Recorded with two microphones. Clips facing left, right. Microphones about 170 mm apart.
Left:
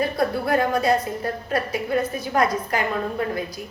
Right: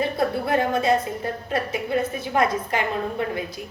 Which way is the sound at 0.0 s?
25° right (ahead or behind).